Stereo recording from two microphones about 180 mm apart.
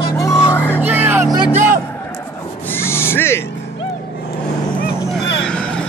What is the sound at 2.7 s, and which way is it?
Owl, 15° left (ahead or behind).